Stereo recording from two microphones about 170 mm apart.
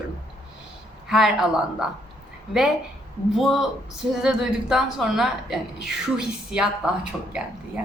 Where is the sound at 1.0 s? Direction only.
5° right (ahead or behind).